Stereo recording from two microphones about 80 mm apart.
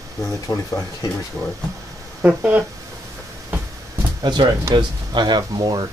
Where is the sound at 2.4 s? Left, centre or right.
Right.